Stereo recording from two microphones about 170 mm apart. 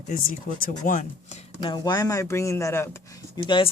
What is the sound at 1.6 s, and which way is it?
Speech, 25° left (ahead or behind).